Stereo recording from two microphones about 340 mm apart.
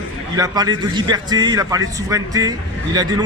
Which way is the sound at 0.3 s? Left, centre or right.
Centre.